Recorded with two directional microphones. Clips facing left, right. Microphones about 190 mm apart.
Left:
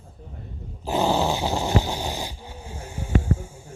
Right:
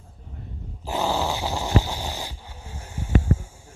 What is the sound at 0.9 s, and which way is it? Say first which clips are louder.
Snoring: left 3 dB; 20° left (ahead or behind).